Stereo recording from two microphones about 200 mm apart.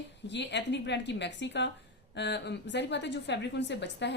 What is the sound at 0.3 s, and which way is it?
A woman's voice, 60° left (ahead or behind).